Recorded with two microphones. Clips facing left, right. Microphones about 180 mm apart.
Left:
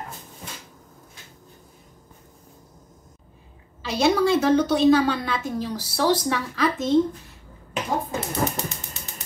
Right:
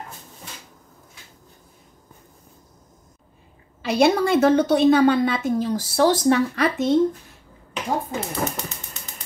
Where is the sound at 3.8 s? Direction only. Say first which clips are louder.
Right 2 dB; 60° right (ahead or behind).